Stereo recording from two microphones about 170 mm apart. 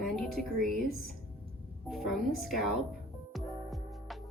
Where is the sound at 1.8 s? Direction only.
Centre (ahead or behind).